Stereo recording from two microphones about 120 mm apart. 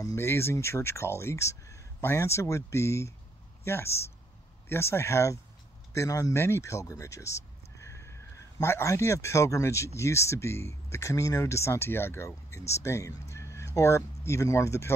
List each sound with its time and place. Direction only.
0.0 s speech: 20° left (ahead or behind)